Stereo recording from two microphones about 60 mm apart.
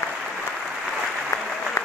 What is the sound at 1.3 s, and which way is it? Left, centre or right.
Applause, left.